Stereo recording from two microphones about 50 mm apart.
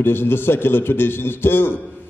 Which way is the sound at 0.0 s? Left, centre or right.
Left.